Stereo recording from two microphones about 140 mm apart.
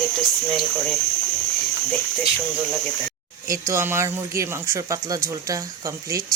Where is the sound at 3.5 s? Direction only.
20° right (ahead or behind).